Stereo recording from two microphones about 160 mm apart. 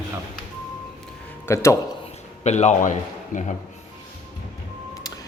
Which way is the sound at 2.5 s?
45° left (ahead or behind).